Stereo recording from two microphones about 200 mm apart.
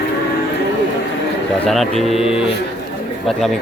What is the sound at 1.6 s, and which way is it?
Speech, centre (ahead or behind).